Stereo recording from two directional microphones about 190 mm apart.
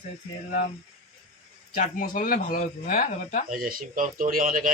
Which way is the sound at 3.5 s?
45° right (ahead or behind).